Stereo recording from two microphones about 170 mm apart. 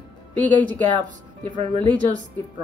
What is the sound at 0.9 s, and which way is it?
A woman's voice, 25° right (ahead or behind).